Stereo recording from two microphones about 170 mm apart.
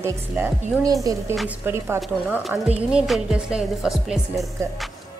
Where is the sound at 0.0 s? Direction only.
15° right (ahead or behind).